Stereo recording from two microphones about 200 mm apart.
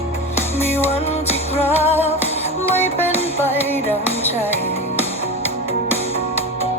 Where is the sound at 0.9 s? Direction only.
30° left (ahead or behind).